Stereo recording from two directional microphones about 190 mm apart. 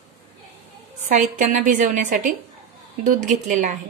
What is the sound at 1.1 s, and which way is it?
A woman's voice, 40° right (ahead or behind).